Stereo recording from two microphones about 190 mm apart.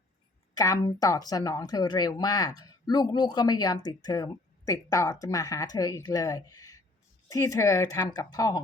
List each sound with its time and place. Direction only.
0.5 s speech: 20° left (ahead or behind)